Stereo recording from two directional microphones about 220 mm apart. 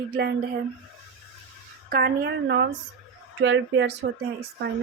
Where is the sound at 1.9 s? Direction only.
45° right (ahead or behind).